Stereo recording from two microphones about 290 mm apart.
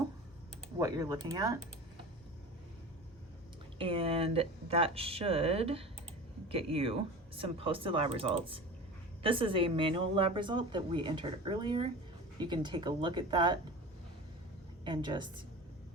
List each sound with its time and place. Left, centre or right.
0.8 s a woman's voice: centre
3.8 s a woman's voice: centre
14.8 s a woman's voice: centre